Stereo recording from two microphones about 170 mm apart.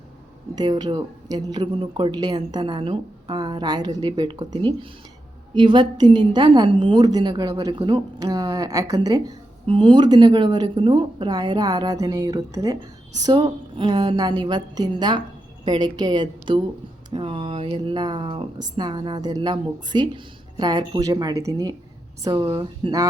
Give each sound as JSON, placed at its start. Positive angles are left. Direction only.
{"t": 0.5, "sound": "speech", "side_deg": -25}